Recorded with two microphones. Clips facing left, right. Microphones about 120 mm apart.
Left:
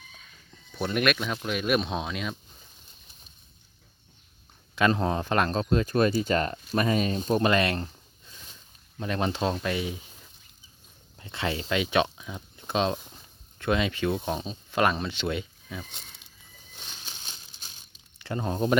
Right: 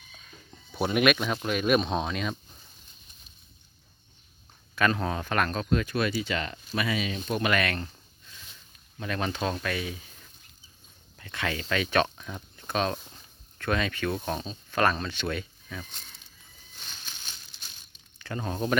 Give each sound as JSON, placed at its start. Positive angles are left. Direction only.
{"t": 0.8, "sound": "speech", "side_deg": -5}
{"t": 4.7, "sound": "speech", "side_deg": 20}
{"t": 9.0, "sound": "speech", "side_deg": 25}
{"t": 13.0, "sound": "a sound", "side_deg": 5}
{"t": 13.6, "sound": "speech", "side_deg": 20}
{"t": 16.7, "sound": "bird flight", "side_deg": 20}
{"t": 18.2, "sound": "speech", "side_deg": 20}